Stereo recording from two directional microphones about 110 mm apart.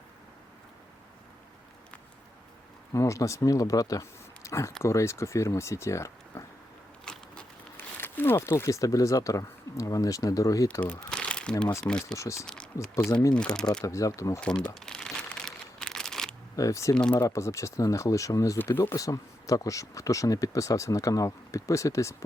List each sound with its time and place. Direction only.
2.9 s speech: 30° left (ahead or behind)
7.0 s biting: 5° left (ahead or behind)
7.8 s speech: 20° left (ahead or behind)
10.7 s speech: 10° left (ahead or behind)
11.1 s crumpling: 10° left (ahead or behind)
11.9 s speech: 5° left (ahead or behind)
12.1 s speech: 25° left (ahead or behind)
13.3 s speech: 10° left (ahead or behind)
13.8 s speech: 30° left (ahead or behind)
14.4 s crumpling: 10° left (ahead or behind)
16.6 s speech: 30° left (ahead or behind)
16.9 s speech: 10° left (ahead or behind)
17.2 s speech: 30° left (ahead or behind)